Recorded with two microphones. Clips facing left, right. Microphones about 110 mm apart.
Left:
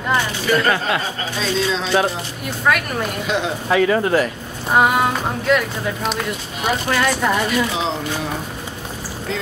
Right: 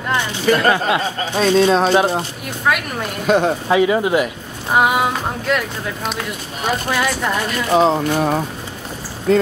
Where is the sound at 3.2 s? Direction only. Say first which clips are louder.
Right 10 dB; 50° right (ahead or behind).